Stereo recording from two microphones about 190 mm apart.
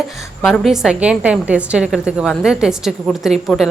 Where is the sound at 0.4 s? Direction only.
Centre (ahead or behind).